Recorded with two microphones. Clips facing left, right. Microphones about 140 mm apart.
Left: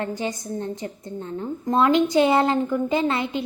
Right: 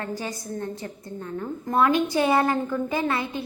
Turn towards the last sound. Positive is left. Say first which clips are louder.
# left 3 dB
turn(degrees=20)  # may be behind; listen again after turning